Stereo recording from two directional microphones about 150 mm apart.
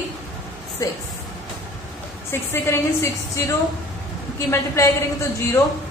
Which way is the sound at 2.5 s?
15° left (ahead or behind).